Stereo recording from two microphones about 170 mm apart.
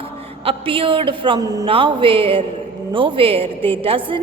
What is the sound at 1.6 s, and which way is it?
A woman's voice, 30° right (ahead or behind).